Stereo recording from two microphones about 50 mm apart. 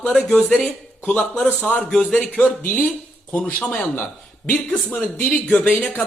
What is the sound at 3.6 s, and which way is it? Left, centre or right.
Speech, left.